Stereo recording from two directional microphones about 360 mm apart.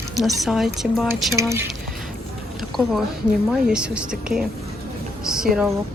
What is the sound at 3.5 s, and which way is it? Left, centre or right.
Speech, centre.